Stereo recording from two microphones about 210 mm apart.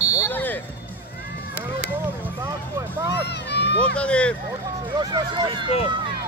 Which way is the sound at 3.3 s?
55° left (ahead or behind).